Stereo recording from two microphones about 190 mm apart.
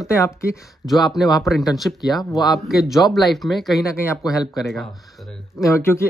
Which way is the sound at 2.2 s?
20° left (ahead or behind).